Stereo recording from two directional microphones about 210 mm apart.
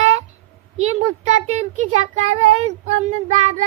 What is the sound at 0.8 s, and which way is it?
A child's voice, 30° right (ahead or behind).